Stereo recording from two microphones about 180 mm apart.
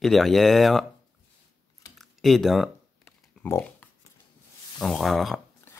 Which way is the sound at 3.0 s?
10° left (ahead or behind).